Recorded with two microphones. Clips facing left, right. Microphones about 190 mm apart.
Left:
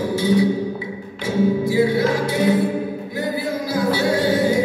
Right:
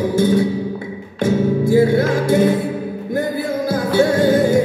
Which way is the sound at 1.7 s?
50° right (ahead or behind).